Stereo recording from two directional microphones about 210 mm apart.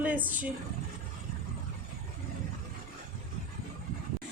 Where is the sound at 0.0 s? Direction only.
10° right (ahead or behind).